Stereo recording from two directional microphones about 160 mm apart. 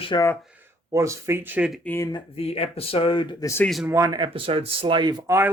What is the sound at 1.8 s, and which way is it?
Speech, 10° left (ahead or behind).